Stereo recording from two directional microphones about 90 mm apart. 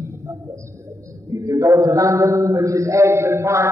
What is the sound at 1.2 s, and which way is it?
A man's voice, 35° right (ahead or behind).